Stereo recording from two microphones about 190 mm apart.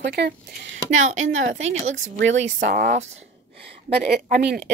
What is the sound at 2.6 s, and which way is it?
Speech, 55° right (ahead or behind).